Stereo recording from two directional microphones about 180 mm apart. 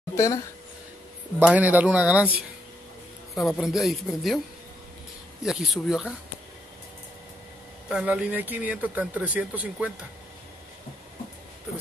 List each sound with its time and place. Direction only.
0.1 s a sound: 15° left (ahead or behind)
1.5 s speech: 10° right (ahead or behind)
3.3 s a man's voice: centre (ahead or behind)
5.4 s a man's voice: centre (ahead or behind)
7.9 s speech: 5° right (ahead or behind)